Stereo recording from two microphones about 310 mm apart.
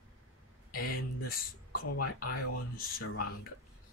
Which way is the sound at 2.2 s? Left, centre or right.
Left.